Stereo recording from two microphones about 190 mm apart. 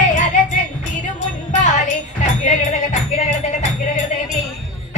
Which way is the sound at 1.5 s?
40° left (ahead or behind).